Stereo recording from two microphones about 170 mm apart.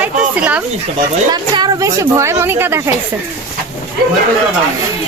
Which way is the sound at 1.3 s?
25° right (ahead or behind).